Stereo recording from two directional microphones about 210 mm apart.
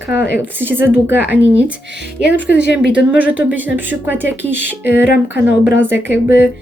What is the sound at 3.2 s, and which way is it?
Speech, 5° right (ahead or behind).